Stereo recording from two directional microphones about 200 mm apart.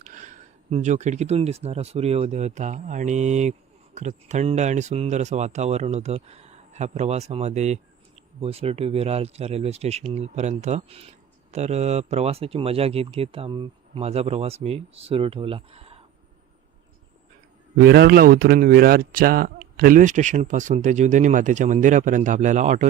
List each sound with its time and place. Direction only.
0.0 s speech: 40° right (ahead or behind)
17.7 s speech: 55° right (ahead or behind); by 22.9 s 35° right (ahead or behind)